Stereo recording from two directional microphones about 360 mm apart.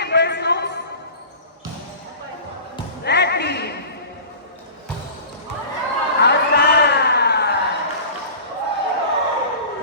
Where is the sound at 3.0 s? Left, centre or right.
Left.